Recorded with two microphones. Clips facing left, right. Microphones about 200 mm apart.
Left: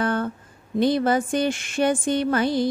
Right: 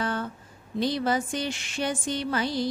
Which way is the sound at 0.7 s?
55° left (ahead or behind).